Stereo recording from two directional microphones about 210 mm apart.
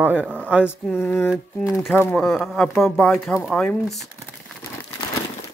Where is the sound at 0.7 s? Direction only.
5° left (ahead or behind).